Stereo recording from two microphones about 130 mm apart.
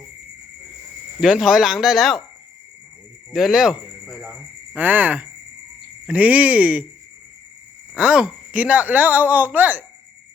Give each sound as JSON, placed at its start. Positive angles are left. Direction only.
{"t": 1.2, "sound": "speech", "side_deg": -5}
{"t": 3.3, "sound": "speech", "side_deg": 0}
{"t": 4.7, "sound": "speech", "side_deg": -15}
{"t": 7.9, "sound": "speech", "side_deg": -5}